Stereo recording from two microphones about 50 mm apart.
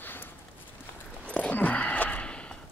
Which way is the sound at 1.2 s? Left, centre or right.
Left.